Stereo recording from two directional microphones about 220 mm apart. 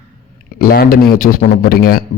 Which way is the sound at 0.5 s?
40° left (ahead or behind).